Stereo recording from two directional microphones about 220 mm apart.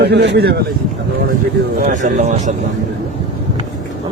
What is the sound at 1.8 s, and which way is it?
Speech, 35° right (ahead or behind).